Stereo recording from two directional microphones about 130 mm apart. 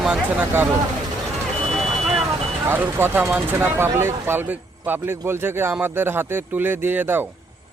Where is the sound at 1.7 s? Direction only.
Centre (ahead or behind).